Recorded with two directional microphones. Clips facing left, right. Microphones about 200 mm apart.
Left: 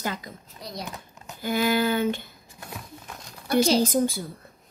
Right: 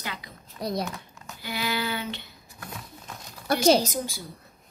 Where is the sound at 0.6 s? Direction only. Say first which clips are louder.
Right 8 dB; 55° right (ahead or behind).